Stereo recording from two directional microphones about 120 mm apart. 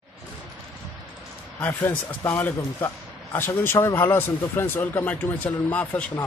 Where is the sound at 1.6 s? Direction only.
15° left (ahead or behind).